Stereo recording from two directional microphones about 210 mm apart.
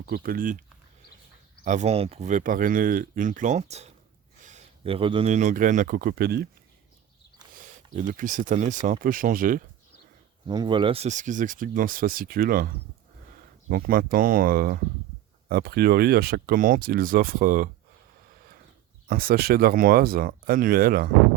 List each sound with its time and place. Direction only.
0.0 s speech: 45° right (ahead or behind)
1.6 s speech: 35° right (ahead or behind)
7.9 s speech: 40° right (ahead or behind)
10.4 s speech: 20° right (ahead or behind); by 17.7 s 40° right (ahead or behind)
19.0 s speech: 45° right (ahead or behind)